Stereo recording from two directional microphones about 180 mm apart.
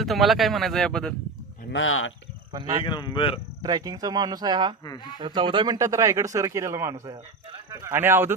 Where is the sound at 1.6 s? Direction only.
90° left.